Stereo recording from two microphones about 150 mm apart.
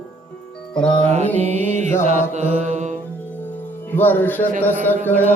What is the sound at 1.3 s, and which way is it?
Music, 50° right (ahead or behind).